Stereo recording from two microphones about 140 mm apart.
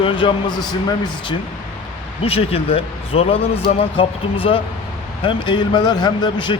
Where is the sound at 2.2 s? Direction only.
45° left (ahead or behind).